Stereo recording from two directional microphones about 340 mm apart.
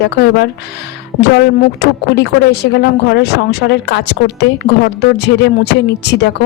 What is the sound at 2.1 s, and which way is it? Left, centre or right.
Speech, left.